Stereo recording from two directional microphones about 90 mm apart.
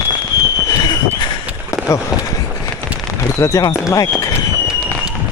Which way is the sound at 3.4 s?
35° left (ahead or behind).